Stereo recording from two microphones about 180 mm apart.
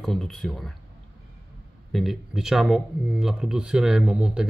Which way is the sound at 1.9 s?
Centre (ahead or behind).